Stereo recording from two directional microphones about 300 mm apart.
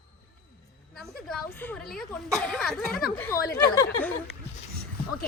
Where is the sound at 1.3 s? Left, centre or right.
Centre.